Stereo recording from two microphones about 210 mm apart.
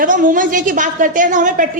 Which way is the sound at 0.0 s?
40° right (ahead or behind).